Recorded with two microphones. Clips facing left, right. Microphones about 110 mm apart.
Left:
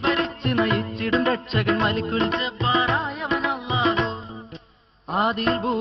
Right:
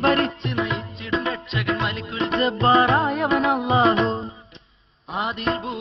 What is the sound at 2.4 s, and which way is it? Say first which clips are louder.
Music: right 6 dB; 50° right (ahead or behind).